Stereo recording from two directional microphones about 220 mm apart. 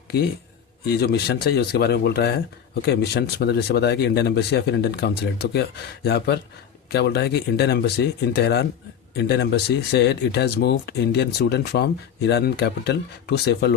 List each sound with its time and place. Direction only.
0.9 s speech: 45° left (ahead or behind)